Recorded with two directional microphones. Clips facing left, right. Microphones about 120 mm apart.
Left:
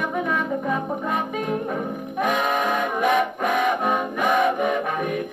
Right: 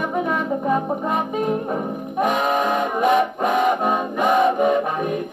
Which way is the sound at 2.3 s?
25° right (ahead or behind).